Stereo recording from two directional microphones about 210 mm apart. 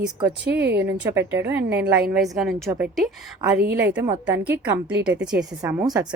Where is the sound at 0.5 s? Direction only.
55° right (ahead or behind).